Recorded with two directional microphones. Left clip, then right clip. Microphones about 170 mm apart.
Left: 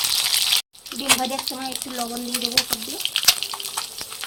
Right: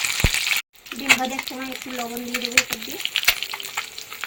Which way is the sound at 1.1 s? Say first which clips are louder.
Right 2 dB; centre (ahead or behind).